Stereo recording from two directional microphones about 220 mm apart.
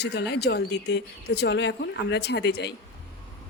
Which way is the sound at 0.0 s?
50° left (ahead or behind).